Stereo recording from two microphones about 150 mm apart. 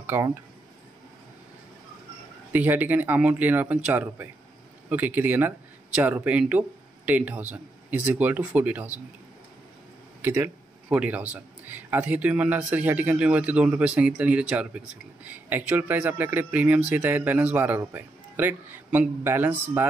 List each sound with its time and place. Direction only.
0.0 s speech: 15° right (ahead or behind)
2.5 s a man's voice: 10° right (ahead or behind)
10.2 s a man's voice: 15° right (ahead or behind)